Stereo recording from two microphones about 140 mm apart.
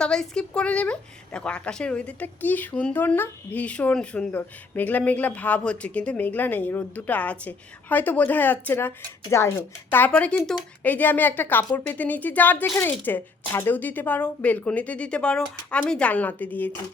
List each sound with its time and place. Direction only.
0.0 s a woman's voice: 5° left (ahead or behind)